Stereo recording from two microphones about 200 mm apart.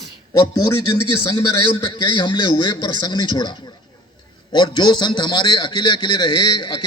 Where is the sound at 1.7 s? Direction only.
25° left (ahead or behind).